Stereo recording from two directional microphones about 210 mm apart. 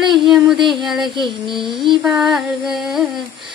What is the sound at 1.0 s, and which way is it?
Child singing, 20° right (ahead or behind).